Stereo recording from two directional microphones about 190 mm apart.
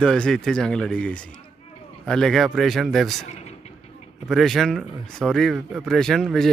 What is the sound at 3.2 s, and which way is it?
Vehicle, 35° left (ahead or behind).